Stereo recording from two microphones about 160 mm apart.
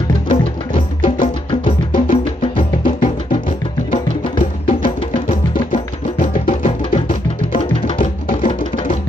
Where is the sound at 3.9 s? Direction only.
35° left (ahead or behind).